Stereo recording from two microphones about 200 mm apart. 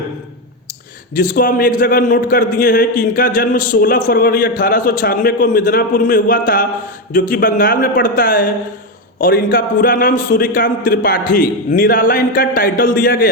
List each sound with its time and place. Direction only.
1.1 s a man's voice: 40° left (ahead or behind)